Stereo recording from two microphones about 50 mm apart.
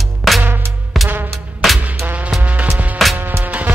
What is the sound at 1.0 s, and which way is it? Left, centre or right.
Music, right.